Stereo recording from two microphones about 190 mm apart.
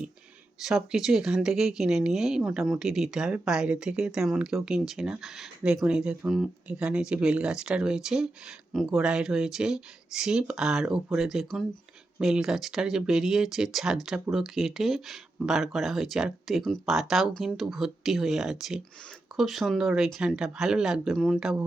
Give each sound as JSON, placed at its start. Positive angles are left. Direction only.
{"t": 0.6, "sound": "speech", "side_deg": -5}